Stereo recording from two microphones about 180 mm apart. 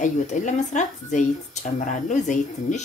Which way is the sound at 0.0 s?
40° left (ahead or behind).